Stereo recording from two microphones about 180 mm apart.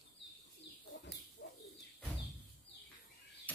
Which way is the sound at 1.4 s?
75° left (ahead or behind).